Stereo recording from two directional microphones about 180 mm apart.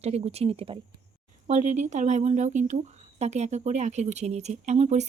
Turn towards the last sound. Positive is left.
turn(degrees=-40)  # may be behind; listen again after turning